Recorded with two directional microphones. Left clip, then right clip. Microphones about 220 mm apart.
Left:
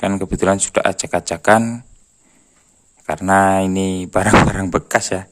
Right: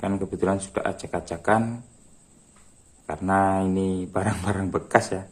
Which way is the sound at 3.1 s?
45° left (ahead or behind).